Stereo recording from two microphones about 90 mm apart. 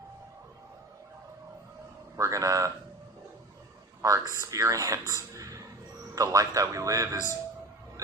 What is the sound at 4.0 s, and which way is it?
Speech, 40° right (ahead or behind).